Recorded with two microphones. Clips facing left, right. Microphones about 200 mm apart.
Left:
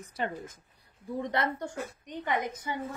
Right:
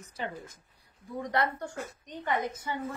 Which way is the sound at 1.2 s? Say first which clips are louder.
Right 1 dB; 25° left (ahead or behind).